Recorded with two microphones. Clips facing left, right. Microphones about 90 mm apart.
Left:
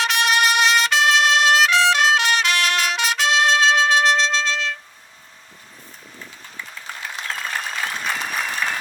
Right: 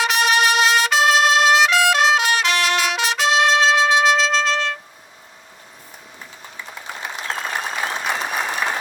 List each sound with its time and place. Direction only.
0.0 s music: 5° right (ahead or behind)
7.3 s applause: 30° right (ahead or behind)